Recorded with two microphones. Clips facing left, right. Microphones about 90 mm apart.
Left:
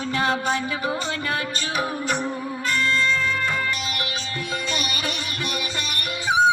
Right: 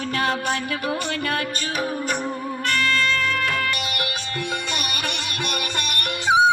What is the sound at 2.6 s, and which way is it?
Music, 60° right (ahead or behind).